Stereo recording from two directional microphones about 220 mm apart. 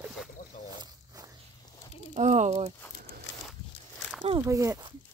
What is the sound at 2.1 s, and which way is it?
Speech, 30° right (ahead or behind).